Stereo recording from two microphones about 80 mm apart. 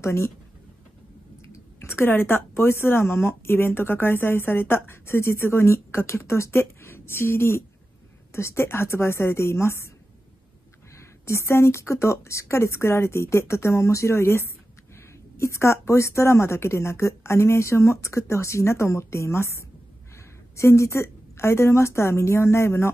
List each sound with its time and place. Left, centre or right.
0.0 s a woman's voice: left
1.8 s a woman's voice: left
11.0 s a woman's voice: left